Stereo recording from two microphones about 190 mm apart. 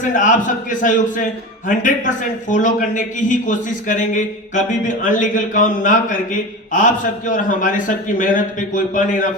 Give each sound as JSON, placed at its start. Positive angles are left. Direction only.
{"t": 0.0, "sound": "a man's voice", "side_deg": 40}